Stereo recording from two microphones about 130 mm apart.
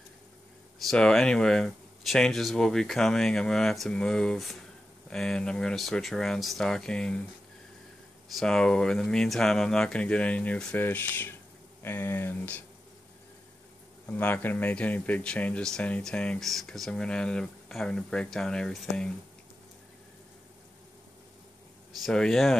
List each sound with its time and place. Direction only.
0.8 s speech: 5° left (ahead or behind)
8.4 s speech: 5° left (ahead or behind)
14.0 s speech: 15° left (ahead or behind)
22.0 s speech: 5° left (ahead or behind)